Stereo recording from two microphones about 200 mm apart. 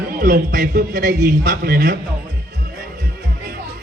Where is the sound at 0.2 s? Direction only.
45° right (ahead or behind).